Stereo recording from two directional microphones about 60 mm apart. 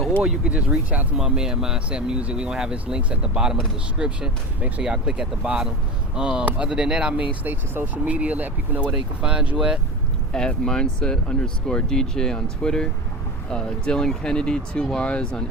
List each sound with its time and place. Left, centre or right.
0.2 s speech: centre
1.1 s speech: centre
7.4 s speech: right
8.0 s speech: right
8.9 s speech: centre
10.3 s speech: centre